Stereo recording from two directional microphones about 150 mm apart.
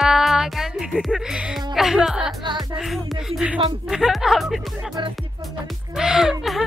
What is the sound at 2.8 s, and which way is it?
A woman's voice, centre (ahead or behind).